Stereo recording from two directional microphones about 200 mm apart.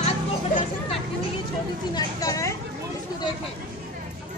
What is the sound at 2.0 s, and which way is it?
Speech, 15° left (ahead or behind).